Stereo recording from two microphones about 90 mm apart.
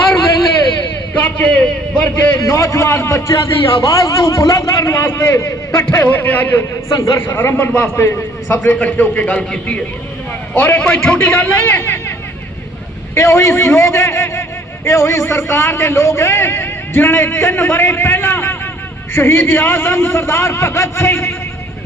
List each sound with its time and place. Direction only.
1.2 s a man's voice: 15° left (ahead or behind)
2.4 s a man's voice: 35° left (ahead or behind)
5.9 s a man's voice: 25° left (ahead or behind)
6.9 s a man's voice: 40° left (ahead or behind)
7.2 s a man's voice: 25° left (ahead or behind)
13.1 s a man's voice: 30° left (ahead or behind)